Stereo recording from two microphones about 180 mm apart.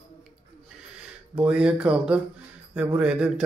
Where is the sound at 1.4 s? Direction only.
5° right (ahead or behind).